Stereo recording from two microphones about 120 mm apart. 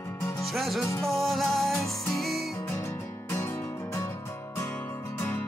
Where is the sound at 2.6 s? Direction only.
20° left (ahead or behind).